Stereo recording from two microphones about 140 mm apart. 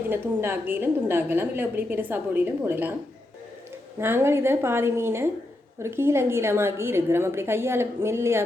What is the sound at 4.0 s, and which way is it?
A woman's voice, 15° right (ahead or behind).